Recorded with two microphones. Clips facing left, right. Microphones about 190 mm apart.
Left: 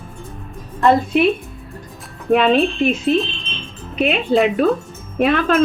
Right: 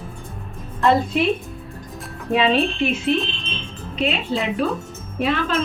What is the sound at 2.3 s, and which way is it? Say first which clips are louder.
Speech: left 4 dB; 55° left (ahead or behind).